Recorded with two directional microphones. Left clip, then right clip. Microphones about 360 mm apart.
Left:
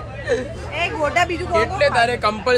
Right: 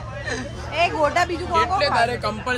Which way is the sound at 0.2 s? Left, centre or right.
Centre.